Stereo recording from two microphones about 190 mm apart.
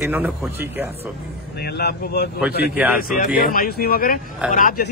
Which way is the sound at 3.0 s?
50° left (ahead or behind).